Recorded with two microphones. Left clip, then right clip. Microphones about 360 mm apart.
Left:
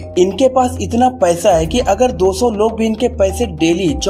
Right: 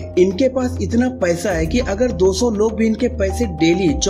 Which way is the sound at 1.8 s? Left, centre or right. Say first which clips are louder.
Left 7 dB; left.